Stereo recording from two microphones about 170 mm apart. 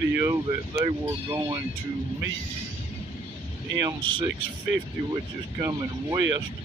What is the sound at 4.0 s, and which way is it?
Speech, 30° right (ahead or behind).